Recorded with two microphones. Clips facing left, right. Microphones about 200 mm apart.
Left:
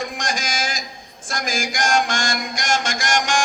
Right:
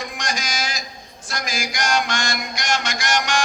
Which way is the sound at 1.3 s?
50° left (ahead or behind).